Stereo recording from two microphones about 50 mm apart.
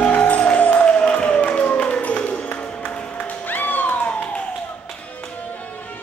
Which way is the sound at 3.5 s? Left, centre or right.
Left.